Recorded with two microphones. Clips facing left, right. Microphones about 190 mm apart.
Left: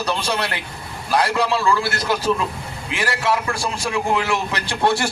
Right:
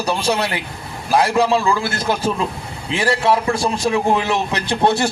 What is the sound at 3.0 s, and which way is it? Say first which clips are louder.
A man's voice: right 5 dB; 25° right (ahead or behind).